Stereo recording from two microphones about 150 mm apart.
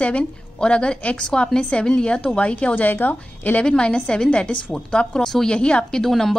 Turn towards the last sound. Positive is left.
turn(degrees=0)  # may be behind; listen again after turning